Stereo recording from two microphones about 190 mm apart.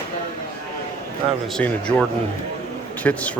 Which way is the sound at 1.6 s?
10° left (ahead or behind).